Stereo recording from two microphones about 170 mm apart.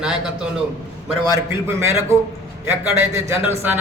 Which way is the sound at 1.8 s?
15° right (ahead or behind).